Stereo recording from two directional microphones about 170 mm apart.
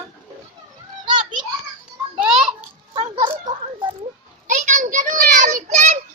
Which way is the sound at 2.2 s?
5° right (ahead or behind).